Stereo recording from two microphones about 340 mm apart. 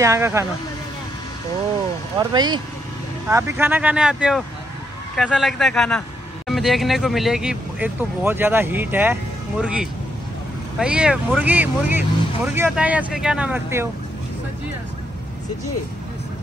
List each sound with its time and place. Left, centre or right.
0.0 s speech: centre
2.1 s speech: centre